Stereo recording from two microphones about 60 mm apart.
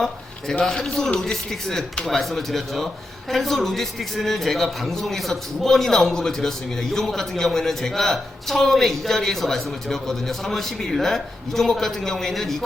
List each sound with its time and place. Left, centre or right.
0.6 s a man's voice: centre